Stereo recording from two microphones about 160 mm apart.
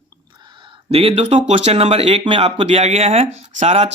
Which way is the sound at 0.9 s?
35° right (ahead or behind).